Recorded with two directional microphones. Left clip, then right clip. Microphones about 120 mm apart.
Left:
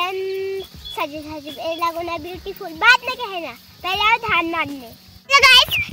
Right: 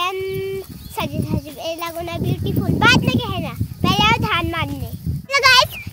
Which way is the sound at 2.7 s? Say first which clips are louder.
Left 1 dB; 45° right (ahead or behind).